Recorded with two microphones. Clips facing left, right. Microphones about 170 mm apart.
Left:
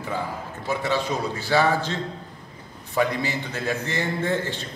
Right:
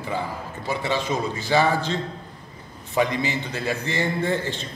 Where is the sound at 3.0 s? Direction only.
15° right (ahead or behind).